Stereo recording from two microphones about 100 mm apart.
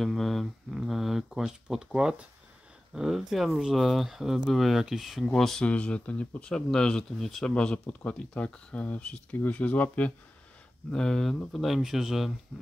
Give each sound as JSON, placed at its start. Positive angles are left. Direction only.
{"t": 0.0, "sound": "speech", "side_deg": 0}